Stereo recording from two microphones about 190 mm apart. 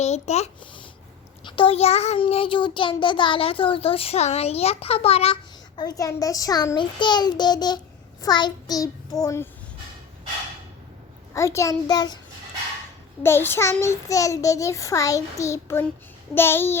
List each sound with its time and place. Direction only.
0.0 s a sound: 35° left (ahead or behind)
1.5 s child singing: 25° left (ahead or behind)
11.3 s a child's voice: 15° left (ahead or behind)
13.2 s a child's voice: 10° left (ahead or behind)